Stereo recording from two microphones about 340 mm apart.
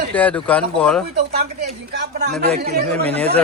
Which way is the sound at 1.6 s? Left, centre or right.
Right.